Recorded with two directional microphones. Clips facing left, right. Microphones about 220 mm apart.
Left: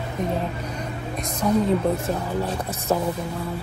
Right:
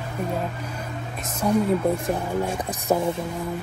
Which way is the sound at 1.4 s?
10° right (ahead or behind).